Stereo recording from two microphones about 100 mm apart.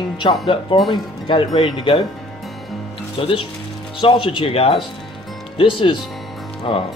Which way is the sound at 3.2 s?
60° left (ahead or behind).